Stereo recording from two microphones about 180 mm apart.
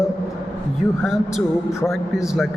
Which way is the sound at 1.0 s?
Centre (ahead or behind).